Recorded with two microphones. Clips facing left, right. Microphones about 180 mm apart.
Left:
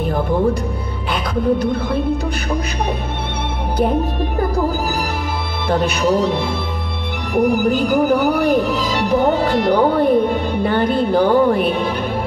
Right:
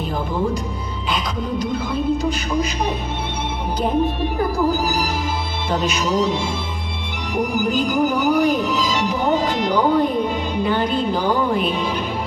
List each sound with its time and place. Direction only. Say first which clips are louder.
1.1 s speech: left 7 dB; 60° left (ahead or behind)
5.7 s speech: left 5 dB; 60° left (ahead or behind)